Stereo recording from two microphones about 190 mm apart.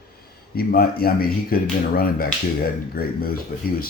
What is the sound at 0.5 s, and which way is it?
Speech, 50° left (ahead or behind).